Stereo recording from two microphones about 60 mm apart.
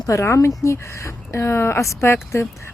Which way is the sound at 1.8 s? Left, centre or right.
Left.